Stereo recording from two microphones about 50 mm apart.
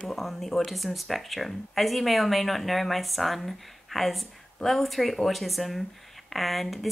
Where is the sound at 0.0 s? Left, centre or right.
Centre.